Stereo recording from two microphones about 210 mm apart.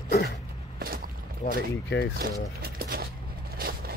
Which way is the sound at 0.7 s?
45° right (ahead or behind).